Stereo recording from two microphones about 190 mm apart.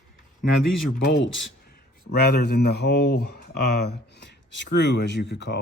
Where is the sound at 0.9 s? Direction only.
70° left (ahead or behind).